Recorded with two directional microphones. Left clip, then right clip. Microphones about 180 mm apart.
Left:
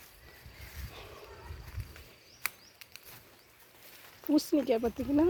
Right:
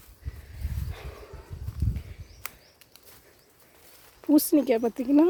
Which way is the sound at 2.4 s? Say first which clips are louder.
Left 4 dB; 5° left (ahead or behind).